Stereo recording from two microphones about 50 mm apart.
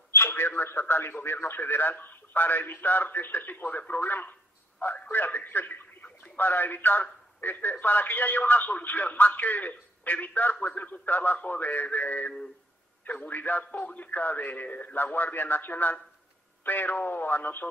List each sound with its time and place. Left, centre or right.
0.1 s a man's voice: left